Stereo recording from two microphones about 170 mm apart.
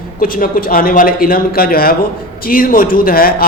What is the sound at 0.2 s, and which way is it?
A man's voice, 55° left (ahead or behind).